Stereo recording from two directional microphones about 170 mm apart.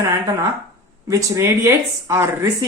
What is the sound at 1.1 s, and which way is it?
Speech, 20° right (ahead or behind).